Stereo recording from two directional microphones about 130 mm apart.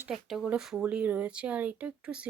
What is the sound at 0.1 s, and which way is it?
Speech, centre (ahead or behind).